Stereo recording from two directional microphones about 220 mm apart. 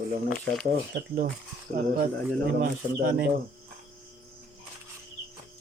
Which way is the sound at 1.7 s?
40° right (ahead or behind).